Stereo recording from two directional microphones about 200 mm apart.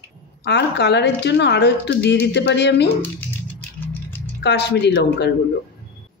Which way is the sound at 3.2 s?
10° left (ahead or behind).